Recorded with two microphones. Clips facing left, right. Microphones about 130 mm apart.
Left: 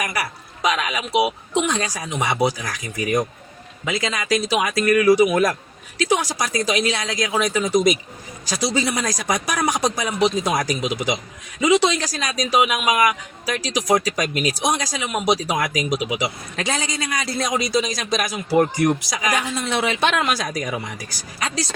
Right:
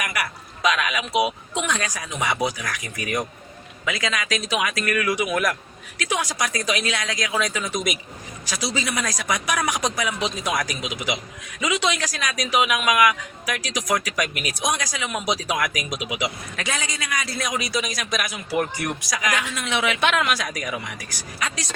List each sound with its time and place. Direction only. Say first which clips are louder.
0.0 s a man's voice: left 2 dB; 30° left (ahead or behind)
15.5 s a man's voice: left 4 dB; 30° left (ahead or behind)
19.1 s a woman's voice: left 2 dB; 25° left (ahead or behind)
19.4 s a man's voice: left 3 dB; 35° left (ahead or behind)